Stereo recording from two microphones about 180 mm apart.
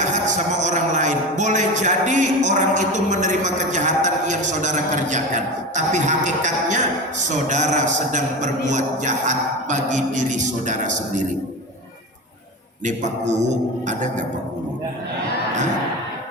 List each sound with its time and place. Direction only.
0.0 s a man's voice: 40° right (ahead or behind)
12.8 s a man's voice: 40° right (ahead or behind)